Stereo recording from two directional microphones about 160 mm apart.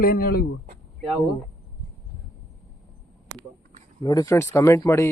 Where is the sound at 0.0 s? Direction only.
70° left (ahead or behind).